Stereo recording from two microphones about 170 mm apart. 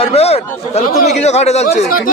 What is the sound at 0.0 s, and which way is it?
A man's voice, 35° left (ahead or behind).